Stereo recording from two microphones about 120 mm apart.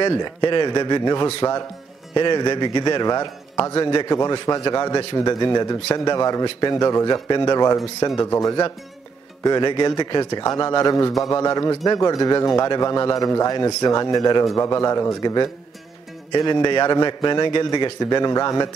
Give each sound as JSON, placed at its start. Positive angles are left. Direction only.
{"t": 0.2, "sound": "a man's voice", "side_deg": 40}